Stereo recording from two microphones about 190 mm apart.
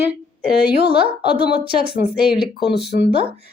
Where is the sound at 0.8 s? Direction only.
55° left (ahead or behind).